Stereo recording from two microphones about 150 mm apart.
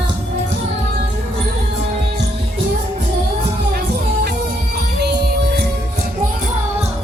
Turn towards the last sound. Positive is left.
turn(degrees=-90)